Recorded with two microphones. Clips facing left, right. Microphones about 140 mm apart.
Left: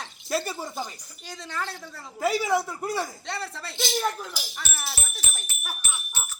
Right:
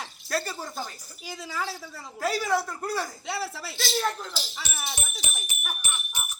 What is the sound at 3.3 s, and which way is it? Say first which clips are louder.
Speech: right 2 dB; 5° right (ahead or behind).